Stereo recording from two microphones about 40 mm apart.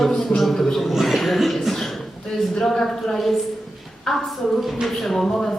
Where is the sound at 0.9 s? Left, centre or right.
Centre.